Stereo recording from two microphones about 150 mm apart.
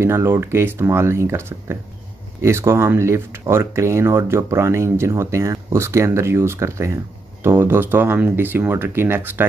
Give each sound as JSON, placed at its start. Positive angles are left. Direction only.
{"t": 0.0, "sound": "speech", "side_deg": -15}